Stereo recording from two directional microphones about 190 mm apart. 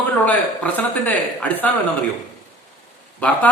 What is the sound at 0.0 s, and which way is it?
Speech, 10° left (ahead or behind).